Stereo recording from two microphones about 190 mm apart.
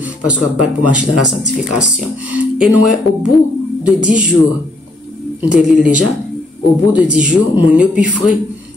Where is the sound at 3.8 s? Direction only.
5° right (ahead or behind).